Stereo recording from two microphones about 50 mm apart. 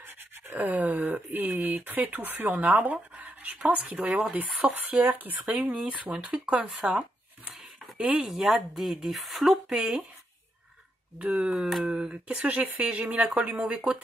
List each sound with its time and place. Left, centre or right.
0.0 s a sound: right
0.6 s speech: right
3.7 s speech: right
4.3 s speech: right
8.0 s speech: centre
11.1 s speech: right
11.5 s speech: centre
11.8 s speech: right
12.3 s speech: right